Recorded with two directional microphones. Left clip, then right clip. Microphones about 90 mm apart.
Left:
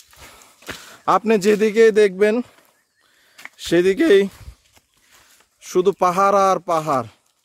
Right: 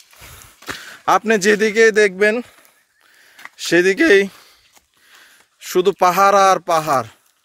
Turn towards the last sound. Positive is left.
turn(degrees=0)  # may be behind; listen again after turning